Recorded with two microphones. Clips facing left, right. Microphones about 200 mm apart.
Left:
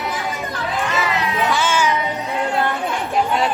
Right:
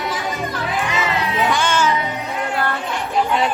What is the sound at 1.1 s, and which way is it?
Music, 30° right (ahead or behind).